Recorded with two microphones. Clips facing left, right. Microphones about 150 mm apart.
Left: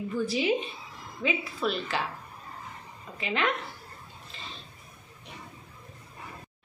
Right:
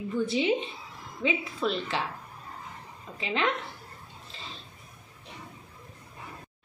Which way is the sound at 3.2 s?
25° right (ahead or behind).